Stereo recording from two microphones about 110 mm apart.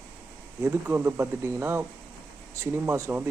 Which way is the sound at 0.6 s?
20° right (ahead or behind).